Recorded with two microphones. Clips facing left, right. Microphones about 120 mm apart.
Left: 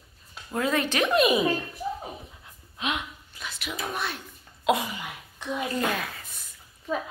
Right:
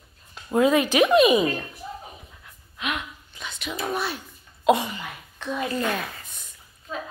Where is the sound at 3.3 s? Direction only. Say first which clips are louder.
Right 3 dB; 5° left (ahead or behind).